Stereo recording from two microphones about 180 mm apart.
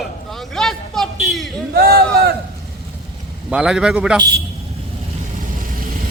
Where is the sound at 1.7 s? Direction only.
60° right (ahead or behind).